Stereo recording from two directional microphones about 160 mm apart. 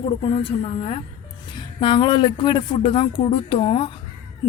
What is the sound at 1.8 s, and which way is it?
A woman's voice, 30° left (ahead or behind).